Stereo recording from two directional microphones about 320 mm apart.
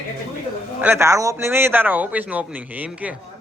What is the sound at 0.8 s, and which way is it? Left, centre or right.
A man's voice, centre.